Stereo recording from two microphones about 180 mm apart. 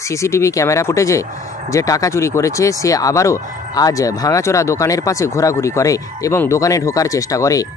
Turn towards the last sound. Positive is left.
turn(degrees=20)  # may be behind; listen again after turning